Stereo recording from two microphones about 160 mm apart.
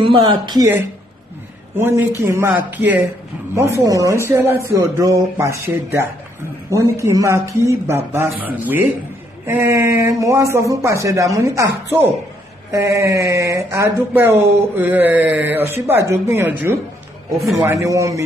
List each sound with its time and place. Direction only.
0.0 s speech: 30° right (ahead or behind)
1.8 s speech: 15° right (ahead or behind)